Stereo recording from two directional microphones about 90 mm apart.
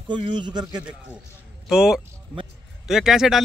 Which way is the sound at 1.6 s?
5° right (ahead or behind).